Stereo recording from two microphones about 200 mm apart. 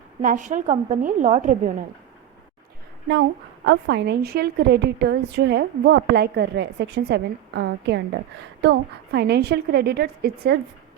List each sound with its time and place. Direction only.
0.2 s a woman's voice: 40° right (ahead or behind)
3.7 s a woman's voice: 60° right (ahead or behind)